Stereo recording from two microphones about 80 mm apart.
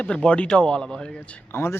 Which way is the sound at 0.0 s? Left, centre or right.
Centre.